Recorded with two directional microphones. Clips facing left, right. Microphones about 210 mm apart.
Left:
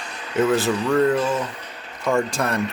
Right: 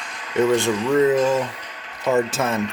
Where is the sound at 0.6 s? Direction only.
5° left (ahead or behind).